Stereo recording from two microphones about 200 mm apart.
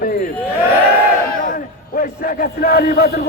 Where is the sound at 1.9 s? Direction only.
45° left (ahead or behind).